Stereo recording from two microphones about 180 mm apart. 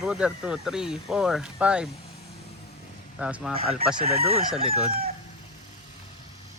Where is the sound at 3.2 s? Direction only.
5° right (ahead or behind).